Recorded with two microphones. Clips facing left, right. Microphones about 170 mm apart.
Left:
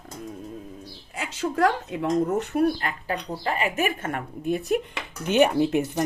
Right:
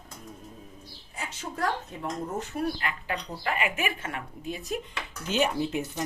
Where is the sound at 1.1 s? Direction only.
90° left; by 2.6 s 75° left (ahead or behind).